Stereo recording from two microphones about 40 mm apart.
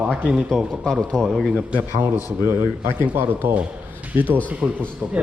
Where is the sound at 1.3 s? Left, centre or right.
Centre.